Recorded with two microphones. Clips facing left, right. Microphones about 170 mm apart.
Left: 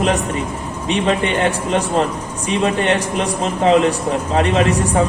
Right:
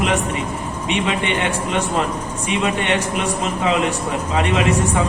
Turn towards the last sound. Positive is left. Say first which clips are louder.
# left 2 dB
turn(degrees=40)  # may be behind; listen again after turning